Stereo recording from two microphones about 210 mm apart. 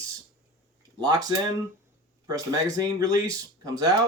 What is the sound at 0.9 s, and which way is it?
Speech, 20° right (ahead or behind).